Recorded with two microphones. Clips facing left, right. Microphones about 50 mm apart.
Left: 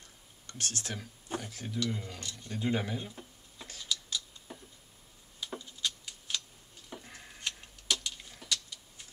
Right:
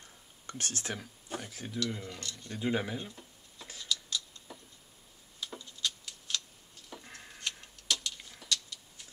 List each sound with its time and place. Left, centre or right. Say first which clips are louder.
0.5 s speech: right 1 dB; right
1.4 s speech: right 1 dB; centre
2.1 s speech: right 1 dB; centre
2.5 s speech: even; centre
3.8 s scissors: right 1 dB; centre
5.4 s tick-tock: left 1 dB; centre
7.3 s a sound: even; centre